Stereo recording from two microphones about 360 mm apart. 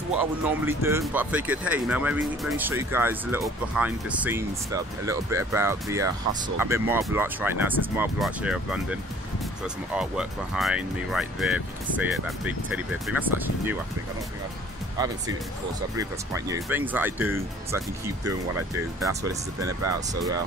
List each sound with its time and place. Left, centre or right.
0.2 s speech: centre
9.9 s speech: centre
15.0 s speech: centre